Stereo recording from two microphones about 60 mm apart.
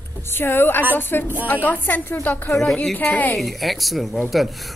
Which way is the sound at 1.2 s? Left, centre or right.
Right.